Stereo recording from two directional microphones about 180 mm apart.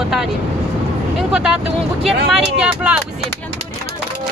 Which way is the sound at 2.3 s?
5° right (ahead or behind).